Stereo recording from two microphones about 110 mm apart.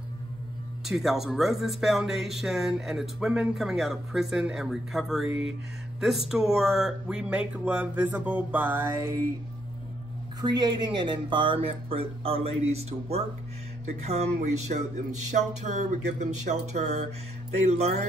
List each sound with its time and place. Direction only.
0.8 s speech: centre (ahead or behind); by 9.2 s 25° right (ahead or behind)
10.4 s speech: 40° right (ahead or behind); by 13.2 s 70° right (ahead or behind)
14.0 s a sound: 85° right
17.6 s speech: 80° right